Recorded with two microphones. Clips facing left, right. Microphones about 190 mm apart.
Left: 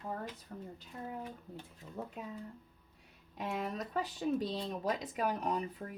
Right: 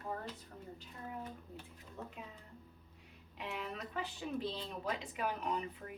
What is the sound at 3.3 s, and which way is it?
Speech, 40° left (ahead or behind).